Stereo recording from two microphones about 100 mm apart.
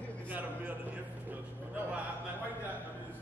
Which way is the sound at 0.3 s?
15° right (ahead or behind).